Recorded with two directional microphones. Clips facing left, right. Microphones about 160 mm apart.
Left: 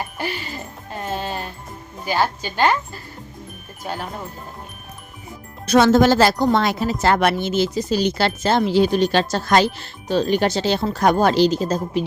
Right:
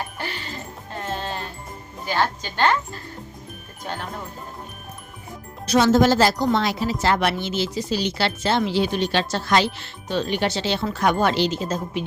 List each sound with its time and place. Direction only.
0.2 s music: 10° left (ahead or behind)
2.0 s a woman's voice: 10° left (ahead or behind)
5.6 s a woman's voice: 55° left (ahead or behind); by 12.0 s 40° left (ahead or behind)